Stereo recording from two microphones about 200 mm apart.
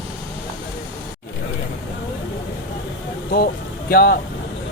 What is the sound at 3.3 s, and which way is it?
Speech, 50° left (ahead or behind).